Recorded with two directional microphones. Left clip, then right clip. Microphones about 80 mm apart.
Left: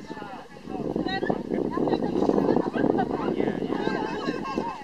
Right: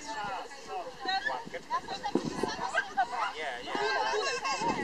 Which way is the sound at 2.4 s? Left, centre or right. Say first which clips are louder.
Left 9 dB; right.